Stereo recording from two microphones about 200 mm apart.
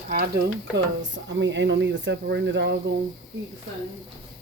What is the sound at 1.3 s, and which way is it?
Speech, 65° right (ahead or behind).